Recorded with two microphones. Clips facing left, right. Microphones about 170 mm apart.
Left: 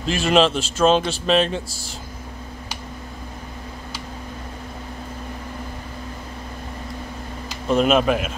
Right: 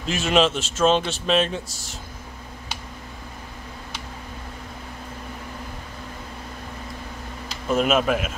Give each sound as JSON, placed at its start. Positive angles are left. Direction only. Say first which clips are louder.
{"t": 0.0, "sound": "speech", "louder": "left 3 dB", "side_deg": 0}
{"t": 1.7, "sound": "speech", "louder": "left 4 dB", "side_deg": 35}
{"t": 7.7, "sound": "speech", "louder": "left 3 dB", "side_deg": 0}